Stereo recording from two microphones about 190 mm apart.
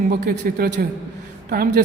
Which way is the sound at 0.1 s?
50° right (ahead or behind).